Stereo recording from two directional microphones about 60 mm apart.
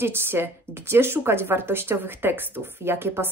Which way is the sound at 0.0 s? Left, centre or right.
Right.